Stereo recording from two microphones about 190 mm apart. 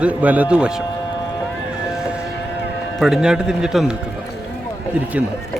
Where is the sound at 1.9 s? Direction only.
5° right (ahead or behind).